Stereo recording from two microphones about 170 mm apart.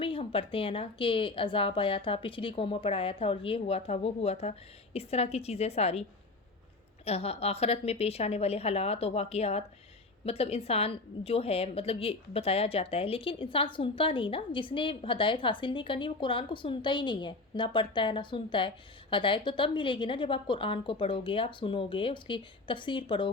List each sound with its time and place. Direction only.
0.0 s a woman's voice: 30° left (ahead or behind)